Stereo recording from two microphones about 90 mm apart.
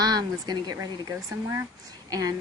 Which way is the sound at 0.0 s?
45° right (ahead or behind).